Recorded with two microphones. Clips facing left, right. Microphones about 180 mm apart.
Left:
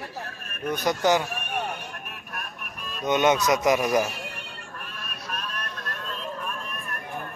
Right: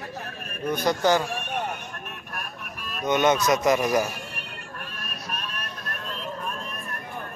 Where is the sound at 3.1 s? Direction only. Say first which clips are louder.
Even; 15° left (ahead or behind).